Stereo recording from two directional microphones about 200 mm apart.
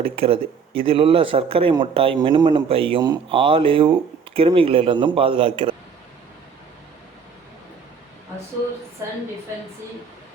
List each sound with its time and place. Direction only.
0.0 s speech: 25° right (ahead or behind)